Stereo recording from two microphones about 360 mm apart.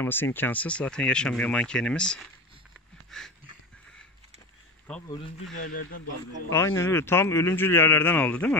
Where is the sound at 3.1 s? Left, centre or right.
Centre.